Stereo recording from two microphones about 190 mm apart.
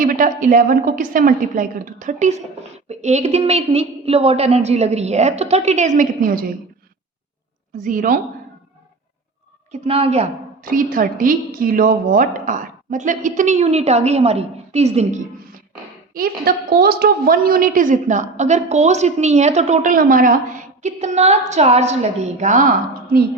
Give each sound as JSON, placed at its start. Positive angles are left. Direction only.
{"t": 0.0, "sound": "a woman's voice", "side_deg": -45}
{"t": 7.9, "sound": "a woman's voice", "side_deg": -45}
{"t": 9.7, "sound": "a woman's voice", "side_deg": -30}
{"t": 10.6, "sound": "a woman's voice", "side_deg": -45}
{"t": 16.1, "sound": "a woman's voice", "side_deg": -50}